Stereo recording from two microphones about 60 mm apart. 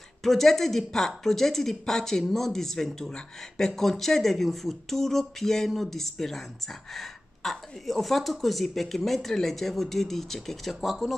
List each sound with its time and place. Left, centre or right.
0.2 s speech: centre